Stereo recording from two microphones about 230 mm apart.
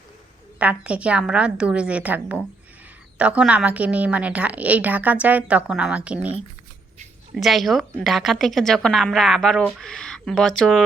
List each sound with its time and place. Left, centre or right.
0.6 s a woman's voice: centre
7.3 s a woman's voice: centre